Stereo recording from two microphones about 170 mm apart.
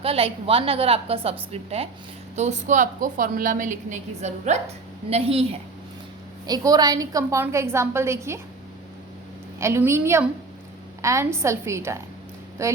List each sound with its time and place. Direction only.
0.0 s a woman's voice: 35° right (ahead or behind)
6.4 s a woman's voice: 20° right (ahead or behind)
9.6 s a woman's voice: 15° right (ahead or behind)